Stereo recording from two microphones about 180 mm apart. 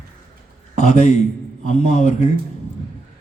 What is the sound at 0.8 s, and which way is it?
A man's voice, 40° left (ahead or behind).